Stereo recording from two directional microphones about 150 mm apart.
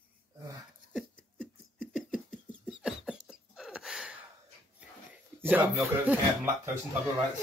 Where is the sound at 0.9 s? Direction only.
5° left (ahead or behind).